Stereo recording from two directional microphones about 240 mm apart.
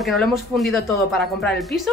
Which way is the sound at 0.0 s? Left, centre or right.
Centre.